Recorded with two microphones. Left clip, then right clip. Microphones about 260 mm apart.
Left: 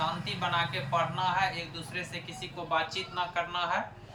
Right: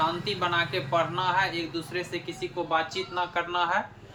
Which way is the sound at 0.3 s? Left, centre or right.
Centre.